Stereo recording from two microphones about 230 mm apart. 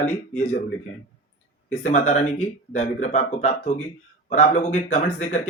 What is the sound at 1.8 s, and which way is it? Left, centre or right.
Speech, left.